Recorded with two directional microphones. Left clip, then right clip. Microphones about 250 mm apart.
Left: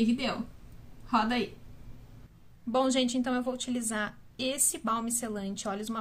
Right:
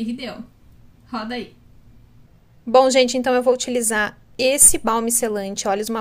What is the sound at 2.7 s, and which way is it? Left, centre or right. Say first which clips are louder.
A woman's voice: right 14 dB; right.